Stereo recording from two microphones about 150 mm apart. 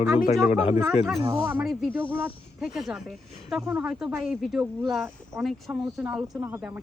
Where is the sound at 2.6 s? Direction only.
Centre (ahead or behind).